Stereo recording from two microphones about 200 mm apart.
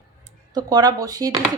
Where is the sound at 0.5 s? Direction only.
20° right (ahead or behind).